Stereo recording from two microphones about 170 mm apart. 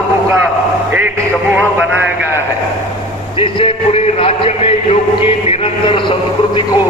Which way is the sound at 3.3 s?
30° left (ahead or behind).